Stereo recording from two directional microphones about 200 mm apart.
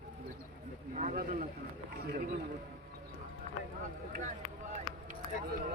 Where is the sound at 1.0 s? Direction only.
40° right (ahead or behind).